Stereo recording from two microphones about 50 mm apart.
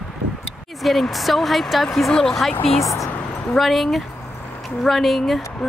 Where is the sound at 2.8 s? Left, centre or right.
Left.